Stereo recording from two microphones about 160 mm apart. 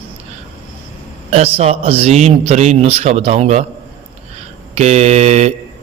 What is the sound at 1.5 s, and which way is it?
A man's voice, 40° right (ahead or behind).